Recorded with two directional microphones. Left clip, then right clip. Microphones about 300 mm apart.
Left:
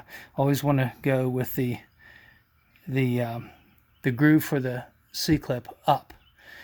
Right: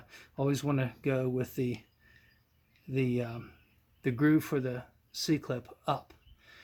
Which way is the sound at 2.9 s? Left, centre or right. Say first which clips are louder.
Left 5 dB; left.